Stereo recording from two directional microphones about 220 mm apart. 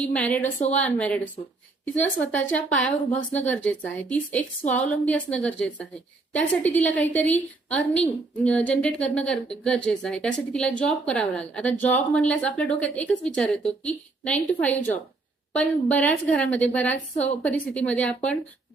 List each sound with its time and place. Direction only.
0.0 s a woman's voice: 5° left (ahead or behind)
2.3 s a woman's voice: 5° left (ahead or behind)